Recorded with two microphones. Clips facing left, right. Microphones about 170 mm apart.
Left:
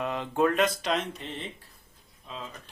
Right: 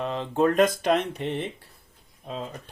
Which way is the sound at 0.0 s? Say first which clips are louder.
Right 2 dB; 30° right (ahead or behind).